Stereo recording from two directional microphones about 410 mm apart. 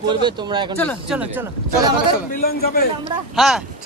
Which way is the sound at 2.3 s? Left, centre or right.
Left.